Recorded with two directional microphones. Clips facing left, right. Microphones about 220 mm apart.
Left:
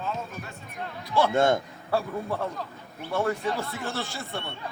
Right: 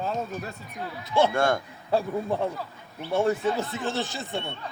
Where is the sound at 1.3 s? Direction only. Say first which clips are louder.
Left 2 dB; 20° left (ahead or behind).